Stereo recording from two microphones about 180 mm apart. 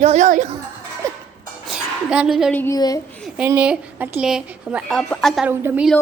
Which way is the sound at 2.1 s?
5° right (ahead or behind).